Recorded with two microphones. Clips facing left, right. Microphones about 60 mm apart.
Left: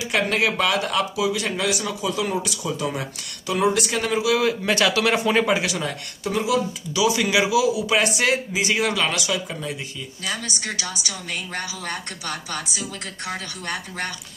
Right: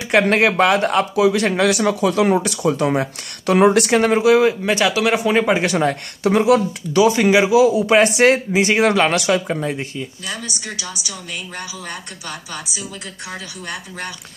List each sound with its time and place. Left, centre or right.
0.0 s speech: right
4.6 s speech: centre
5.5 s speech: right
6.2 s speech: right
13.7 s speech: centre